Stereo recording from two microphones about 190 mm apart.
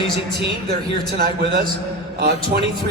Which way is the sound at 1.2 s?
55° right (ahead or behind).